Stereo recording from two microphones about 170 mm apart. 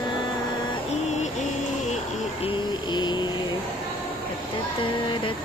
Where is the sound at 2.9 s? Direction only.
25° left (ahead or behind).